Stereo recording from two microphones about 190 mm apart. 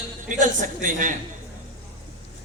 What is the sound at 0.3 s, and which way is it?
Speech, 40° right (ahead or behind).